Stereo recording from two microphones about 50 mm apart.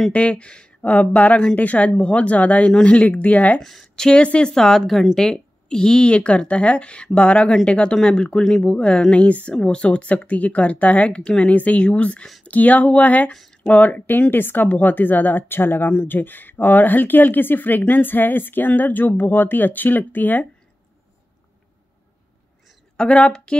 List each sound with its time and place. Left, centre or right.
0.1 s speech: left
3.6 s speech: centre; by 13.3 s left
13.3 s speech: centre
13.7 s speech: left
22.9 s a woman's voice: centre